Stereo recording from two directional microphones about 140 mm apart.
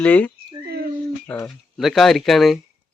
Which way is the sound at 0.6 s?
90° right.